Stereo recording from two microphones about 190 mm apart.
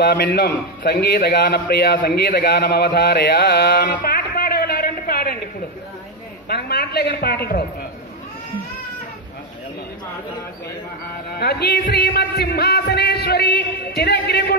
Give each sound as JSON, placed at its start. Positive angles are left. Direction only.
{"t": 0.0, "sound": "a man's voice", "side_deg": 55}
{"t": 4.0, "sound": "music", "side_deg": 50}
{"t": 6.5, "sound": "a man's voice", "side_deg": 55}
{"t": 11.3, "sound": "a man's voice", "side_deg": 60}